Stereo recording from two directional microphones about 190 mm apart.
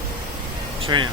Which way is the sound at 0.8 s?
25° right (ahead or behind).